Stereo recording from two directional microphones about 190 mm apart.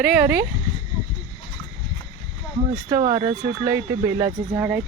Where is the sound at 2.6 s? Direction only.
30° right (ahead or behind).